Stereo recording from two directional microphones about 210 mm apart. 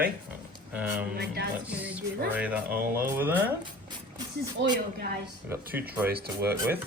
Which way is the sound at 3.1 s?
10° right (ahead or behind).